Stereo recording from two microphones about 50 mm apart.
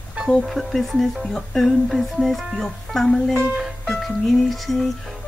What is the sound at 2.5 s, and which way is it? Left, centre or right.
Speech, centre.